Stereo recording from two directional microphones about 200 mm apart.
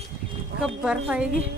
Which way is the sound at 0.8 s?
5° right (ahead or behind).